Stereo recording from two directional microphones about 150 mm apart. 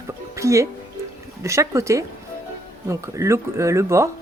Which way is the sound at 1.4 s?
20° right (ahead or behind).